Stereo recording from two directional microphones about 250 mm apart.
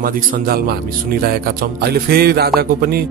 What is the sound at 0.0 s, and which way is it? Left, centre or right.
A man's voice, right.